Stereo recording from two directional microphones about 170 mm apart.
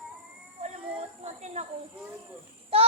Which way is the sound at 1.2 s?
40° right (ahead or behind).